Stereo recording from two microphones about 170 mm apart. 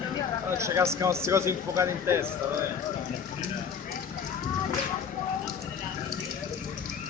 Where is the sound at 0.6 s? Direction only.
15° right (ahead or behind).